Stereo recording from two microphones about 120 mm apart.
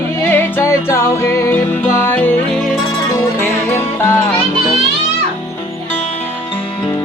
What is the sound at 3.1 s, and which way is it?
Music, 20° left (ahead or behind).